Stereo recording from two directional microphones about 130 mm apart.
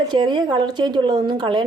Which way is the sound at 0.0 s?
35° right (ahead or behind).